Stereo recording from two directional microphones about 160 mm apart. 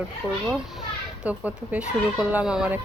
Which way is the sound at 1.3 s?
10° right (ahead or behind).